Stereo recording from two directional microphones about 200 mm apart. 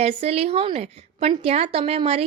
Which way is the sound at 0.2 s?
30° right (ahead or behind).